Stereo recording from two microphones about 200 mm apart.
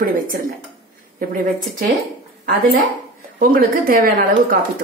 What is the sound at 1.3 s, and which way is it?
Speech, 45° right (ahead or behind).